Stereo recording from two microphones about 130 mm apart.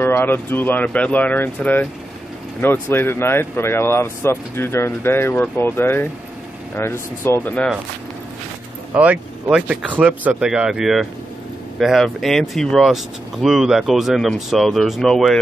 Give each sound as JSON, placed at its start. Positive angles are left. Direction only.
{"t": 0.0, "sound": "speech", "side_deg": 15}
{"t": 8.9, "sound": "speech", "side_deg": -10}